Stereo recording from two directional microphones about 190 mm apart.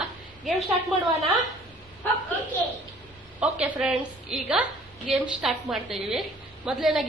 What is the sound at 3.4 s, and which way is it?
A woman's voice, 5° right (ahead or behind).